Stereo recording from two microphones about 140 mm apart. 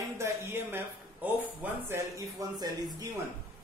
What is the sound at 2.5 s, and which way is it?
Speech, 30° right (ahead or behind).